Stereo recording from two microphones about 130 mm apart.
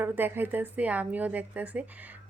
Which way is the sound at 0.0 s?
15° right (ahead or behind).